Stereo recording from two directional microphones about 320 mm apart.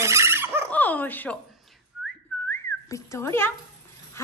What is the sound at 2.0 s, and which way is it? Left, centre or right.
Whistling, centre.